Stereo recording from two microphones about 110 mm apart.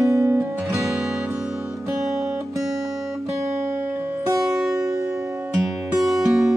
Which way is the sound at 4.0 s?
20° right (ahead or behind).